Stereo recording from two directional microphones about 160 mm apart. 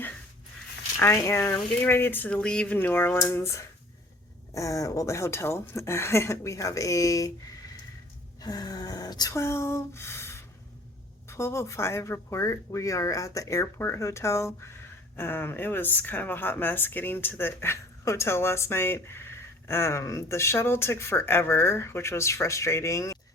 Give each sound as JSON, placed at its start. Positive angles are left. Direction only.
{"t": 1.0, "sound": "speech", "side_deg": 15}
{"t": 8.4, "sound": "a sound", "side_deg": 25}
{"t": 11.3, "sound": "speech", "side_deg": 15}